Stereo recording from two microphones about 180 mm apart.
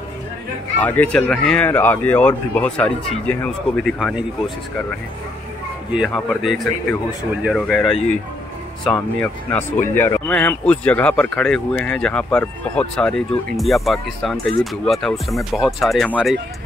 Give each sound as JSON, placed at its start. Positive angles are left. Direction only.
{"t": 0.7, "sound": "speech", "side_deg": 10}
{"t": 5.9, "sound": "speech", "side_deg": 0}
{"t": 9.2, "sound": "speech", "side_deg": 10}